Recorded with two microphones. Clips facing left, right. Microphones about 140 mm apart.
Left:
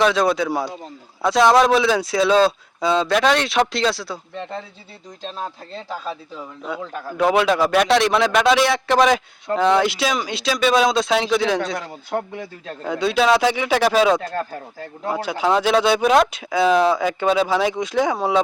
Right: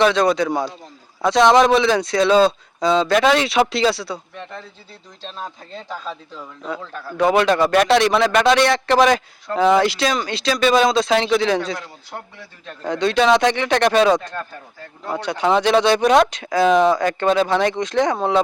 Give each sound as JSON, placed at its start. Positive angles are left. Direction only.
{"t": 0.0, "sound": "speech", "side_deg": 0}
{"t": 5.4, "sound": "a man's voice", "side_deg": 5}
{"t": 6.9, "sound": "a man's voice", "side_deg": 15}
{"t": 7.2, "sound": "speech", "side_deg": 0}
{"t": 12.1, "sound": "speech", "side_deg": 65}
{"t": 12.8, "sound": "speech", "side_deg": 5}